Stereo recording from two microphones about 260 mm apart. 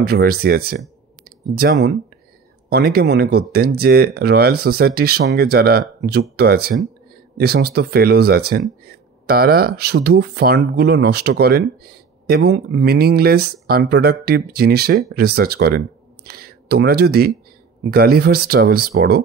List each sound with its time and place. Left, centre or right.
0.0 s speech: right